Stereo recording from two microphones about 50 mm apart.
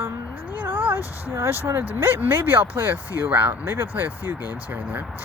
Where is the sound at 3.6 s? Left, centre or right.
Right.